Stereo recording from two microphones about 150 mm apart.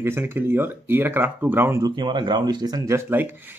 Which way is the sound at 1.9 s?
30° right (ahead or behind).